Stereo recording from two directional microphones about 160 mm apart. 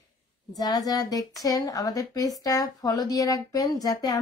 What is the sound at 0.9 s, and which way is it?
Speech, 25° left (ahead or behind).